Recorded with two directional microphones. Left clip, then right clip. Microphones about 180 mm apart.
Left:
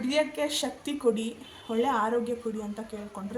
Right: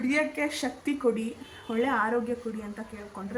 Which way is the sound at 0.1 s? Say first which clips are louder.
Left 2 dB; 15° left (ahead or behind).